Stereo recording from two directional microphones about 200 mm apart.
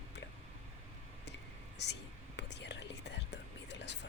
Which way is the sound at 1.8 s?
60° left (ahead or behind).